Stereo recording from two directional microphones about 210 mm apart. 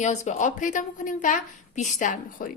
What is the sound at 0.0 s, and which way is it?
Speech, 35° left (ahead or behind).